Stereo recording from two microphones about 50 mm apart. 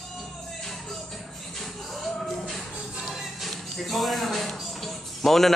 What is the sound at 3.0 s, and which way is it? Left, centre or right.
Music, centre.